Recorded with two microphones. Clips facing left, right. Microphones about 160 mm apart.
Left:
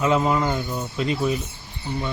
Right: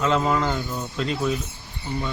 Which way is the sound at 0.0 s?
5° left (ahead or behind).